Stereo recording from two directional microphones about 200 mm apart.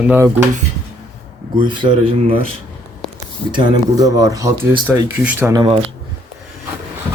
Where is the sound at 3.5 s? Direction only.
20° right (ahead or behind).